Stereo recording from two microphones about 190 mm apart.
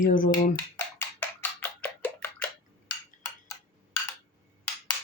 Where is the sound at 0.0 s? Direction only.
45° left (ahead or behind).